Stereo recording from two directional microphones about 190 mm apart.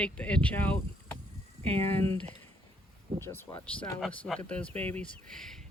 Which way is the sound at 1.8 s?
10° left (ahead or behind).